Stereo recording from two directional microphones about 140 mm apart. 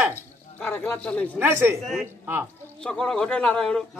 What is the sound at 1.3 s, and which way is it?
Speech, 15° right (ahead or behind).